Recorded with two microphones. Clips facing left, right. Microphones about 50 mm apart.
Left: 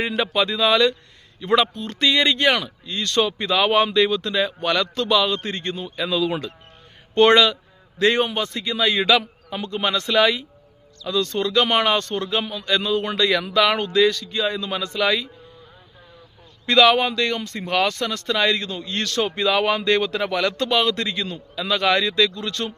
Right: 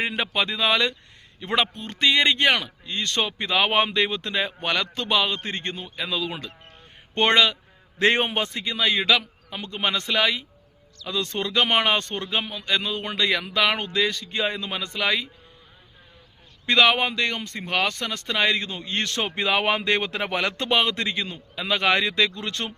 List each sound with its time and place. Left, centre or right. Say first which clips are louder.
0.0 s speech: left 3 dB; centre
7.9 s a man's voice: left 2 dB; right
8.5 s a man's voice: left 5 dB; centre
14.3 s a man's voice: left 2 dB; right
14.5 s speech: left 4 dB; centre
16.6 s a man's voice: left 3 dB; centre